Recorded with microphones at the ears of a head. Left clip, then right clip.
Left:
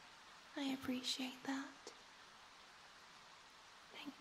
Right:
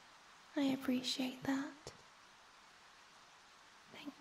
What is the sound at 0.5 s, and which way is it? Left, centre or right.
Speech, right.